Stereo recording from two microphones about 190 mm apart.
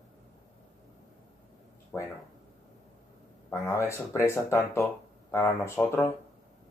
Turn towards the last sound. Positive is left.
turn(degrees=15)  # may be behind; listen again after turning